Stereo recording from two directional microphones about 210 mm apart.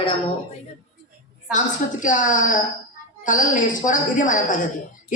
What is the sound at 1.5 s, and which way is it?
Speech, 40° left (ahead or behind).